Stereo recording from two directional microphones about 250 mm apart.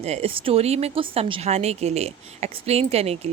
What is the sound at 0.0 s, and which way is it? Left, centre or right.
A woman's voice, right.